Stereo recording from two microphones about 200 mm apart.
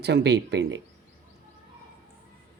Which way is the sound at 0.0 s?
55° right (ahead or behind).